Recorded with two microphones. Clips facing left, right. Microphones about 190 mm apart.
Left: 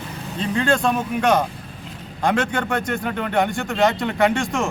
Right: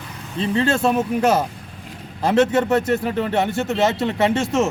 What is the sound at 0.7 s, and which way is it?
Speech, 5° right (ahead or behind).